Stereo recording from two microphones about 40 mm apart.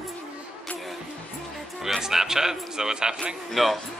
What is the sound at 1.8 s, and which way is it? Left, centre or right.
A man's voice, centre.